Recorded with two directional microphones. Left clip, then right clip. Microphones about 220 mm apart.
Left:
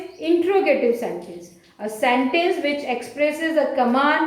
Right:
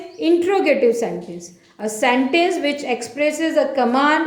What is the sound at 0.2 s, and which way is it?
A woman's voice, 50° right (ahead or behind).